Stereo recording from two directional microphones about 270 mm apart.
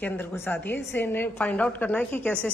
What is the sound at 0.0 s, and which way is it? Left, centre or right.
A woman's voice, centre.